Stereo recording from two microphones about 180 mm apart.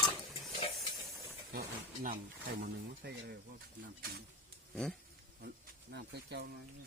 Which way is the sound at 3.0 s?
65° right (ahead or behind).